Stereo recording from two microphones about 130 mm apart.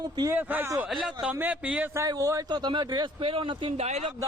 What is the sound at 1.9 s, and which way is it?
Speech, 25° right (ahead or behind).